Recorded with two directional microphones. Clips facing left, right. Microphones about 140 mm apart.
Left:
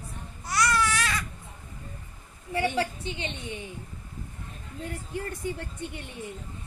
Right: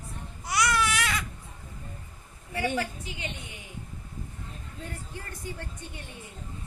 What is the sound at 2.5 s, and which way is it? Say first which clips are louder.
A woman's voice: left 2 dB; 30° left (ahead or behind).